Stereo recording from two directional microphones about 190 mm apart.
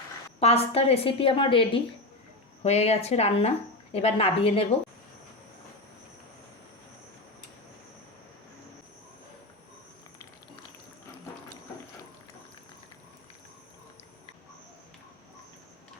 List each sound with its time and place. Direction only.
0.3 s a woman's voice: 35° left (ahead or behind)